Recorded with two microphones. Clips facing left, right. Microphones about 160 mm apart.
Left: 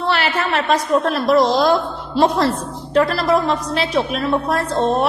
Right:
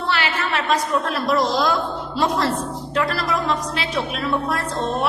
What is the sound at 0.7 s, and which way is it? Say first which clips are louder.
Speech: left 5 dB; 55° left (ahead or behind).